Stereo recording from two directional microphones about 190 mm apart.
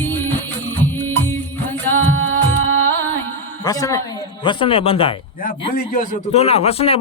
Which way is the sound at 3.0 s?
10° left (ahead or behind).